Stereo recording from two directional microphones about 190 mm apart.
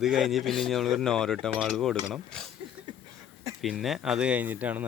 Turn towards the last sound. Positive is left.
turn(degrees=-10)  # may be behind; listen again after turning